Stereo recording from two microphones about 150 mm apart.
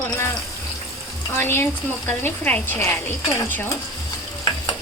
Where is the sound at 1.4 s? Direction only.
15° left (ahead or behind).